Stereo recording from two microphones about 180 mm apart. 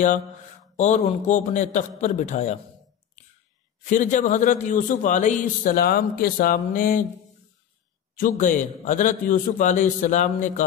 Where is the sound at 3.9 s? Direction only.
45° left (ahead or behind).